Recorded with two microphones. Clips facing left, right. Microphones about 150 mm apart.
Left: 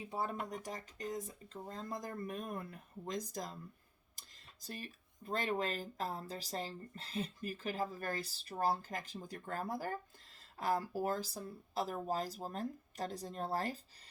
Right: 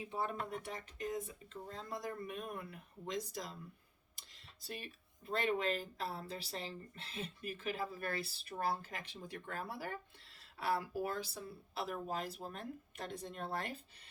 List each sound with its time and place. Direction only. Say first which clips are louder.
0.5 s speech: even; 40° left (ahead or behind)